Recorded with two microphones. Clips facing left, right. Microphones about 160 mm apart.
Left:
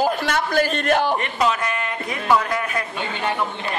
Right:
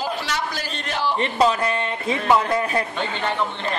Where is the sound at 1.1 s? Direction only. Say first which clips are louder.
Right 2 dB; 30° right (ahead or behind).